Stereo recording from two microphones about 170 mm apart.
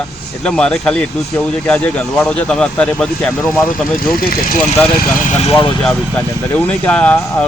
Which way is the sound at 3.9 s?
60° left (ahead or behind).